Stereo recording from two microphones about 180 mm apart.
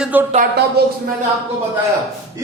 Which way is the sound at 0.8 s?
60° right (ahead or behind).